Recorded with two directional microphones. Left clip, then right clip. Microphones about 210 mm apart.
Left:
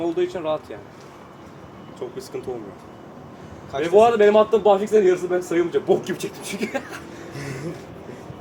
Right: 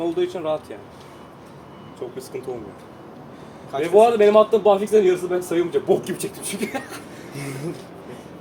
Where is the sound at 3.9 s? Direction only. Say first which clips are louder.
Right 1 dB; 5° left (ahead or behind).